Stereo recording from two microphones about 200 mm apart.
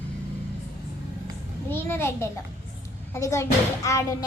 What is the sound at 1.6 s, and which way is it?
A child's voice, 10° left (ahead or behind).